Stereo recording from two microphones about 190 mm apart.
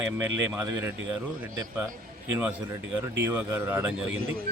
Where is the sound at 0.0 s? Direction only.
10° right (ahead or behind).